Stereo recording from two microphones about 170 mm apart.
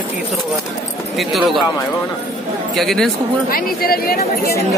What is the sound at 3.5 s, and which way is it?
Speech, 60° left (ahead or behind).